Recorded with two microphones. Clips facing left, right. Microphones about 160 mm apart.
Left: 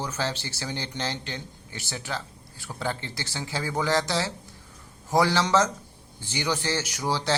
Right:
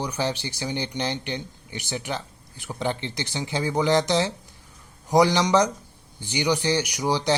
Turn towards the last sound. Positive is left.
turn(degrees=-15)  # may be behind; listen again after turning